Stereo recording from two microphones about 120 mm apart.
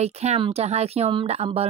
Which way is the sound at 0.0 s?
65° right (ahead or behind).